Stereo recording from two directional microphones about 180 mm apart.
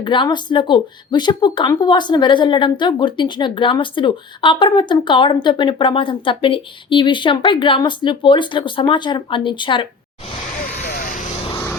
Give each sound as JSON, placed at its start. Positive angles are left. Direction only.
{"t": 0.0, "sound": "speech", "side_deg": 25}
{"t": 10.6, "sound": "vehicle", "side_deg": 50}